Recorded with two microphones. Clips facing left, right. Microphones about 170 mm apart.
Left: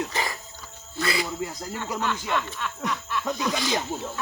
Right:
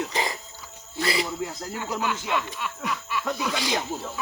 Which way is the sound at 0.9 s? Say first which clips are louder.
Right 1 dB; 25° right (ahead or behind).